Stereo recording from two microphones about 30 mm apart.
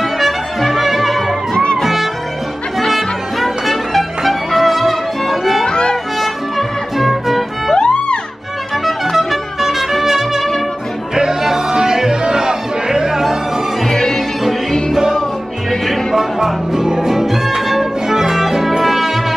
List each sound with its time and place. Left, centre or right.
0.0 s music: centre
5.7 s music: left
7.0 s music: centre
7.7 s music: left
9.1 s music: centre
11.4 s music: centre
13.8 s music: centre
15.7 s music: centre
16.2 s music: centre